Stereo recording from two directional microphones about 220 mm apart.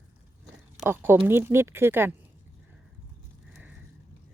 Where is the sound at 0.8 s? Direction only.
10° right (ahead or behind).